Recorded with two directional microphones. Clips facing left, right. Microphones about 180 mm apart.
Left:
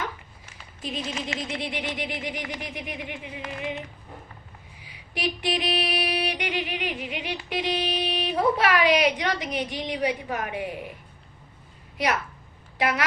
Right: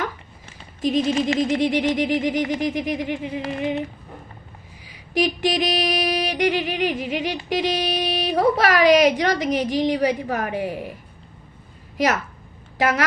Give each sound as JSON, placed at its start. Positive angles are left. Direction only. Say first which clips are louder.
{"t": 0.9, "sound": "a woman's voice", "louder": "right 12 dB", "side_deg": -40}
{"t": 4.8, "sound": "a sound", "louder": "right 9 dB", "side_deg": -40}
{"t": 7.5, "sound": "a woman's voice", "louder": "right 4 dB", "side_deg": -40}
{"t": 11.9, "sound": "a woman's voice", "louder": "right 5 dB", "side_deg": -45}